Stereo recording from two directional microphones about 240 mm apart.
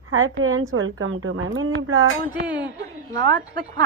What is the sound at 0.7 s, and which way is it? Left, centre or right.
A woman's voice, right.